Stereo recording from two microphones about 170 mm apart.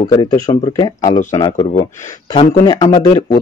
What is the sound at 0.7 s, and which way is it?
Speech, 25° left (ahead or behind).